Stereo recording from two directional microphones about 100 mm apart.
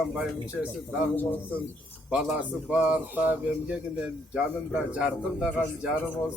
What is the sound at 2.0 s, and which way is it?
A man's voice, 5° right (ahead or behind).